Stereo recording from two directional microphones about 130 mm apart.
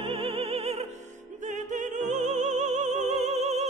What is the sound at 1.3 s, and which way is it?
Music, 70° right (ahead or behind).